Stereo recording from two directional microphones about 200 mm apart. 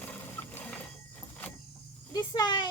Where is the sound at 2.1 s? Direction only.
20° left (ahead or behind).